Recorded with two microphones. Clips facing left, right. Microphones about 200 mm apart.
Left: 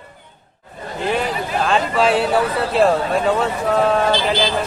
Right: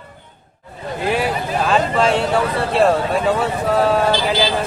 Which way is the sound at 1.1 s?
5° right (ahead or behind).